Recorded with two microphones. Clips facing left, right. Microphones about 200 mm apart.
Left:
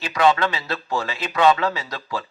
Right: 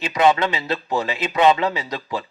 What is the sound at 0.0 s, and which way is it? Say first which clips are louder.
A man's voice: right 1 dB; 20° right (ahead or behind).